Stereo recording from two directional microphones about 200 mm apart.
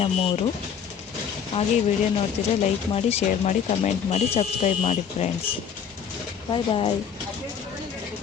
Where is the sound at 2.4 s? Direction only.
35° left (ahead or behind).